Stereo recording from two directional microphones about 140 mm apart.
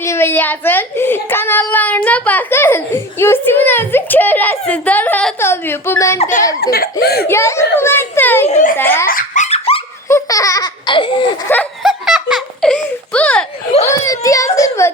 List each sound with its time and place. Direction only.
0.0 s a woman's voice: 20° left (ahead or behind)
6.1 s speech: 60° left (ahead or behind)
6.9 s a woman's voice: 20° left (ahead or behind)
8.4 s speech: 60° left (ahead or behind)
8.8 s a woman's voice: 15° left (ahead or behind)
9.0 s laughter: 70° left (ahead or behind); by 9.8 s 45° left (ahead or behind)
10.1 s laughter: 20° left (ahead or behind)
11.8 s laughter: 5° right (ahead or behind)
12.7 s a sound: 10° left (ahead or behind)
14.0 s whimper: 25° left (ahead or behind)